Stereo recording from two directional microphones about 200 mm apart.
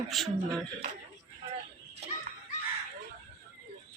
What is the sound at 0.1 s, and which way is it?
Speech, centre (ahead or behind).